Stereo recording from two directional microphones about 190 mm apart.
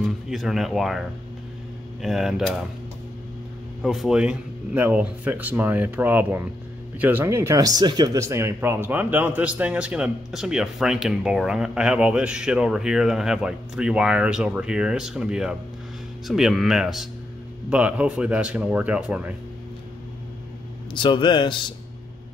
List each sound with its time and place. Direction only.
0.0 s speech: centre (ahead or behind)
3.8 s speech: centre (ahead or behind)
20.9 s speech: 25° left (ahead or behind)